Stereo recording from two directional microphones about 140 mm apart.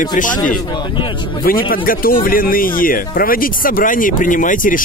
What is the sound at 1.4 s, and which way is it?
Speech, 90° left.